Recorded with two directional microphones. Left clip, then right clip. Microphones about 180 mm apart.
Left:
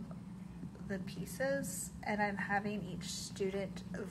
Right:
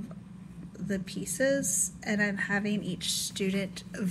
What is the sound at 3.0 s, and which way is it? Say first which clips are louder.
Speech: right 8 dB; 10° left (ahead or behind).